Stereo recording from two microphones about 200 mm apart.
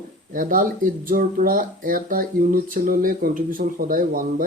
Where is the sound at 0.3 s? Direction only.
45° right (ahead or behind).